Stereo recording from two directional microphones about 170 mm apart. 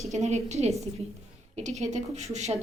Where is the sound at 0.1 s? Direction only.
40° right (ahead or behind).